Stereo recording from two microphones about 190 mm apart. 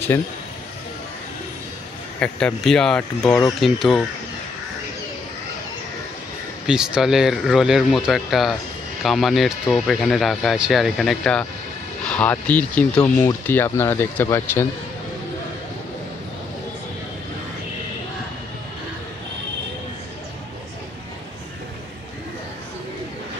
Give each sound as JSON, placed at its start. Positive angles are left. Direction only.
{"t": 2.1, "sound": "speech", "side_deg": 5}
{"t": 6.7, "sound": "speech", "side_deg": -5}